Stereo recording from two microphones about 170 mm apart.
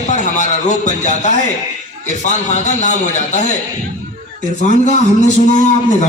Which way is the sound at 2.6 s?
45° left (ahead or behind).